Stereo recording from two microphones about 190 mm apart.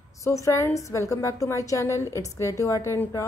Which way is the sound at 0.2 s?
15° left (ahead or behind).